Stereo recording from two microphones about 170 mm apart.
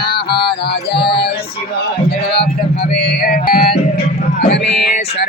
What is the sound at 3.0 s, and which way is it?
Music, 60° left (ahead or behind).